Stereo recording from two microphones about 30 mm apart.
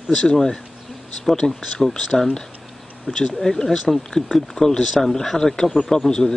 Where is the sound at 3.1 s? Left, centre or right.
Centre.